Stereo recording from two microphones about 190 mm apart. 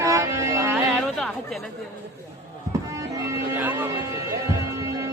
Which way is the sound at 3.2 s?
15° right (ahead or behind).